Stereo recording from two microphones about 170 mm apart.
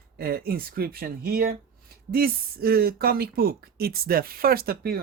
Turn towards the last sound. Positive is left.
turn(degrees=-65)  # may be behind; listen again after turning